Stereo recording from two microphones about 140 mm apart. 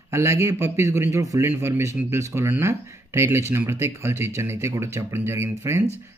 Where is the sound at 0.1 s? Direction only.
20° right (ahead or behind).